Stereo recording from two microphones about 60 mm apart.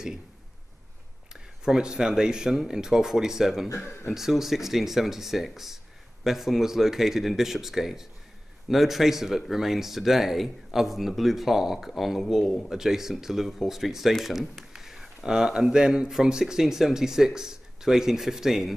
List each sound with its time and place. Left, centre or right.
1.3 s speech: centre
3.7 s speech: left
4.1 s speech: centre